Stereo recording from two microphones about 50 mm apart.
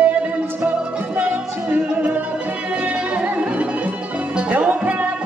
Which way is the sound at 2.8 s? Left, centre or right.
Right.